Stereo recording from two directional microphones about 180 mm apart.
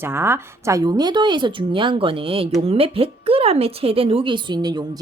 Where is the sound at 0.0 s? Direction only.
15° right (ahead or behind).